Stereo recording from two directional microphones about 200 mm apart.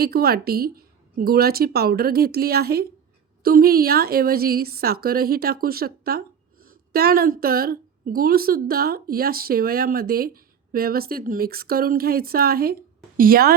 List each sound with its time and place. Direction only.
0.0 s a woman's voice: 50° right (ahead or behind)